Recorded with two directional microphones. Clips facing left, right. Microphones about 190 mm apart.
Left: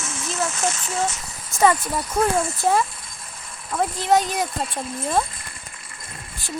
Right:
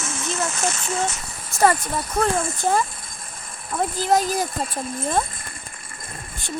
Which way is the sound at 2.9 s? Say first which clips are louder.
Right 1 dB; 50° right (ahead or behind).